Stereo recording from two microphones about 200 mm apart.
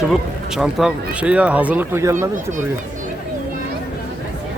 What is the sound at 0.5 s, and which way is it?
Speech, 5° right (ahead or behind).